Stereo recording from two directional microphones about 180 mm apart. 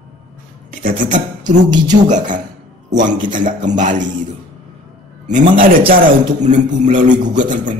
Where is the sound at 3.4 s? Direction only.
45° right (ahead or behind).